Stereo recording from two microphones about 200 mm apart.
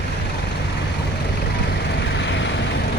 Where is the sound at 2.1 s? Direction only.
65° left (ahead or behind).